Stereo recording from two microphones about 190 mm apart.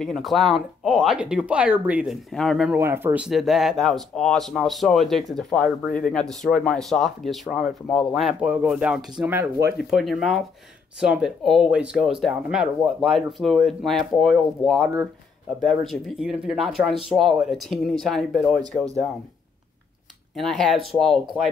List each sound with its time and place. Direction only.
0.0 s speech: centre (ahead or behind)
9.8 s speech: centre (ahead or behind)
15.9 s speech: 5° right (ahead or behind)
20.3 s speech: centre (ahead or behind)